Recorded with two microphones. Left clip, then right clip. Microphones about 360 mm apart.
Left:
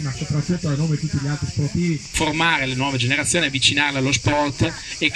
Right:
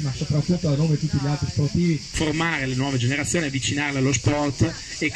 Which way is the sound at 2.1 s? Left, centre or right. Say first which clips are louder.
Left 6 dB; left.